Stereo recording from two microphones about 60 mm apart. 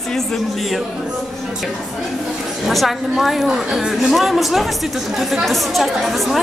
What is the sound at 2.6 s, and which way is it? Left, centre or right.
Speech, centre.